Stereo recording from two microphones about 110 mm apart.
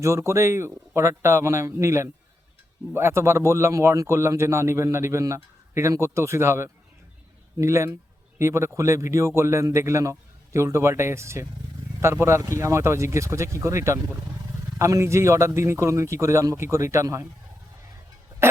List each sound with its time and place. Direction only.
0.0 s speech: 25° right (ahead or behind)